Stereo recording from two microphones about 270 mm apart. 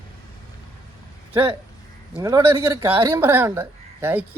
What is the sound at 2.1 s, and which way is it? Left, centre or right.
Speech, centre.